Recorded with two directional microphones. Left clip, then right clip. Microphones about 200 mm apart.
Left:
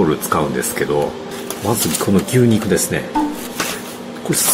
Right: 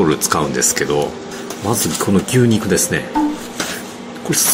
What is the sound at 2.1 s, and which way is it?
Speech, 5° right (ahead or behind).